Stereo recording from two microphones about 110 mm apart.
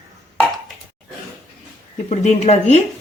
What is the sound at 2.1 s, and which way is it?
Speech, 90° left.